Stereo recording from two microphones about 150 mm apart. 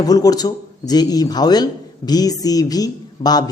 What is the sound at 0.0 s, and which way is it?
Speech, 25° left (ahead or behind).